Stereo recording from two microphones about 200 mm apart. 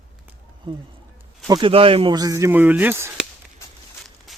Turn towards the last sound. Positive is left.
turn(degrees=0)  # may be behind; listen again after turning